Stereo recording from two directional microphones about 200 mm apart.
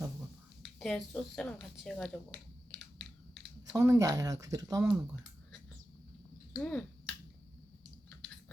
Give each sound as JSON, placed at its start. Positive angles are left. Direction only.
{"t": 0.8, "sound": "speech", "side_deg": 5}
{"t": 3.7, "sound": "speech", "side_deg": -15}
{"t": 6.5, "sound": "finger snapping", "side_deg": 5}